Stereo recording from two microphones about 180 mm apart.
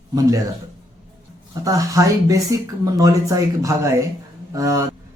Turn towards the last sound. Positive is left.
turn(degrees=-20)  # may be behind; listen again after turning